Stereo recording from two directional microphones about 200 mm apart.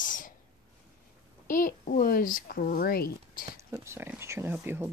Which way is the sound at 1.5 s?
45° left (ahead or behind).